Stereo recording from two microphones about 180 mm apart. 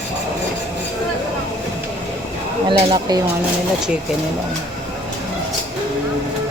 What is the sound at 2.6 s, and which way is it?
Speech, 25° right (ahead or behind).